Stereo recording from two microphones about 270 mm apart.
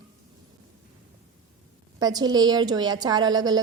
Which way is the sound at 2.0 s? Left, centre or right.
Centre.